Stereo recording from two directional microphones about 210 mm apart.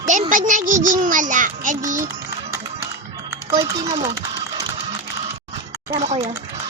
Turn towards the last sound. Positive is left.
turn(degrees=-30)  # may be behind; listen again after turning